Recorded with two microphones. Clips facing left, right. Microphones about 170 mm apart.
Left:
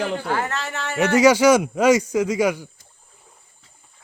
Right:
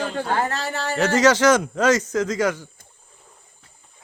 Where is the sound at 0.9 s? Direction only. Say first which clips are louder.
Left 2 dB; 10° left (ahead or behind).